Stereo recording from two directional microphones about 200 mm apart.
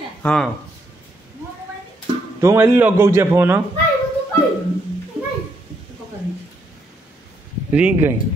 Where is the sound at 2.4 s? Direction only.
10° right (ahead or behind).